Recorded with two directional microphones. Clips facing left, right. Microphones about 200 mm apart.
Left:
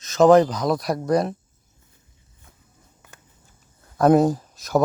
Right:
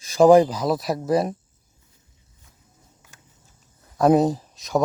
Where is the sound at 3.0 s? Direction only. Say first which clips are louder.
Left 7 dB; 55° left (ahead or behind).